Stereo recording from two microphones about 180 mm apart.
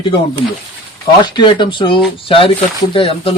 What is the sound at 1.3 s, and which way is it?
Speech, 25° left (ahead or behind).